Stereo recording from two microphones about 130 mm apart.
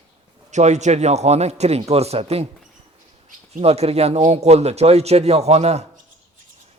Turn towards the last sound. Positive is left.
turn(degrees=-55)  # may be behind; listen again after turning